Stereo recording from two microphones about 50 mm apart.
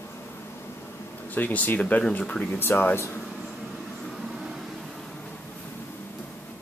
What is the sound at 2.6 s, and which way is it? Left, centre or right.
Speech, left.